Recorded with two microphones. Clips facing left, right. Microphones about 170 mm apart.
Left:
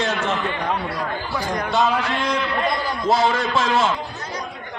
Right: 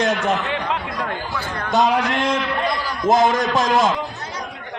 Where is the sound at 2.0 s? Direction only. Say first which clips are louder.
Right 2 dB; 50° right (ahead or behind).